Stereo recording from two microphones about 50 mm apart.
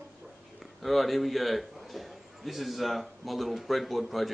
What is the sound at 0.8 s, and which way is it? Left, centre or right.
A man's voice, centre.